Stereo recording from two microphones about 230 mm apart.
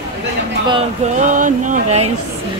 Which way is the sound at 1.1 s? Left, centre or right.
Right.